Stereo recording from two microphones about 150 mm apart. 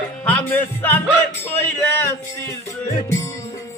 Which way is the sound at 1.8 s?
15° left (ahead or behind).